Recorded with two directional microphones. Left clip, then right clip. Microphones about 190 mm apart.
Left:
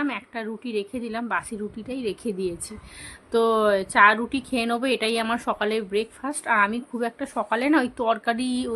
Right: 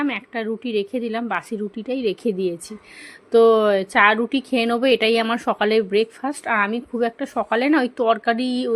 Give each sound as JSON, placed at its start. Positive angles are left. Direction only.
{"t": 0.0, "sound": "a woman's voice", "side_deg": -20}